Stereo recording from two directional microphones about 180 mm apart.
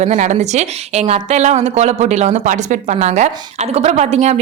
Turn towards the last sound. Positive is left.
turn(degrees=-40)  # may be behind; listen again after turning